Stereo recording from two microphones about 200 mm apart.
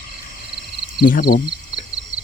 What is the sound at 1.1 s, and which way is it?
Speech, 50° left (ahead or behind).